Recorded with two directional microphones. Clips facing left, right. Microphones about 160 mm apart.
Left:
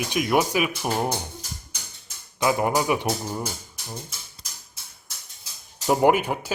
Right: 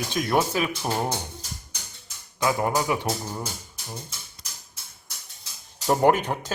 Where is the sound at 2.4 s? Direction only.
20° left (ahead or behind).